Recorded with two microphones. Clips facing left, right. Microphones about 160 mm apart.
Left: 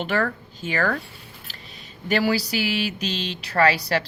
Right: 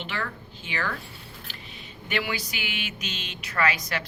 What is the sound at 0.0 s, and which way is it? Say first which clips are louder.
Speech: left 9 dB; 45° left (ahead or behind).